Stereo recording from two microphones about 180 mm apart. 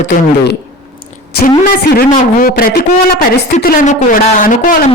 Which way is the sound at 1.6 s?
55° left (ahead or behind).